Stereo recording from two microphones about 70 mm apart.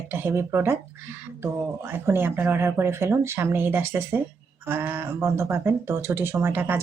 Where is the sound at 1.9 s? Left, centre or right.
Right.